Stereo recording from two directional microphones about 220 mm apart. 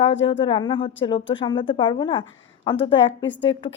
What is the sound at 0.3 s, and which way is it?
Speech, 25° left (ahead or behind).